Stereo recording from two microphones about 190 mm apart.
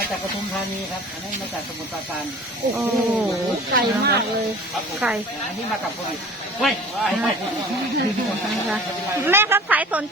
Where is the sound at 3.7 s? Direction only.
55° right (ahead or behind).